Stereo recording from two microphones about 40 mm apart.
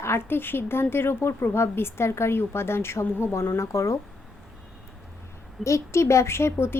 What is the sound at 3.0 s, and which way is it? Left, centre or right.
Speech, left.